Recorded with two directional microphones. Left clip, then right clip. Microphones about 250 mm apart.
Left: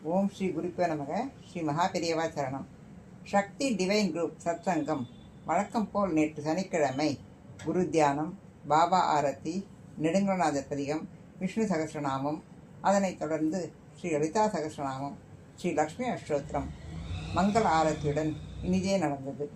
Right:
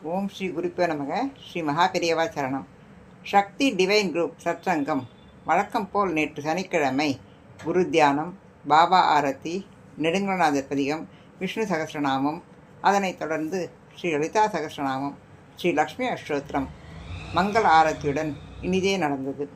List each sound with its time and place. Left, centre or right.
0.1 s a woman's voice: right